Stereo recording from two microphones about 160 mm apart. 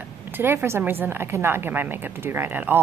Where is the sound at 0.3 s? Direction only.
15° right (ahead or behind).